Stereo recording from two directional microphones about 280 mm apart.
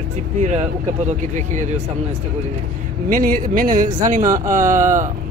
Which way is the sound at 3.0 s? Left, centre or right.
Right.